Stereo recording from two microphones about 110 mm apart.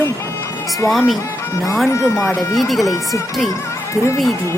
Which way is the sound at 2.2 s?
Centre (ahead or behind).